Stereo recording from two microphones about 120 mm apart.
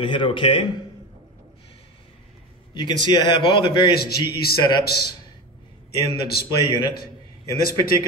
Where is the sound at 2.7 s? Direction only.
40° left (ahead or behind).